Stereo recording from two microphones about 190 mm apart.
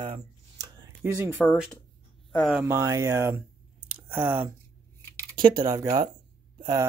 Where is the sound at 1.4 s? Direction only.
Centre (ahead or behind).